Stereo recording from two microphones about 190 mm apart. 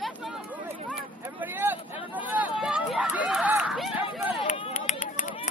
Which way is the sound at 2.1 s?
10° right (ahead or behind).